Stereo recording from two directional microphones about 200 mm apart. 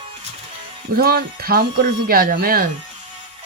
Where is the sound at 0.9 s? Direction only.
50° right (ahead or behind).